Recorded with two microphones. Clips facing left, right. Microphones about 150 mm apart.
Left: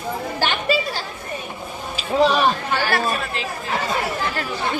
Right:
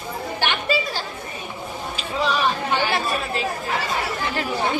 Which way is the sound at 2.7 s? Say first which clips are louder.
Left 1 dB; 15° right (ahead or behind).